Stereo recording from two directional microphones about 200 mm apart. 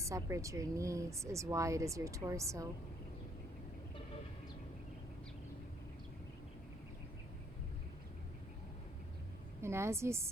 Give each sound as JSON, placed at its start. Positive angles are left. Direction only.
{"t": 0.0, "sound": "speech", "side_deg": -15}
{"t": 9.6, "sound": "a woman's voice", "side_deg": -15}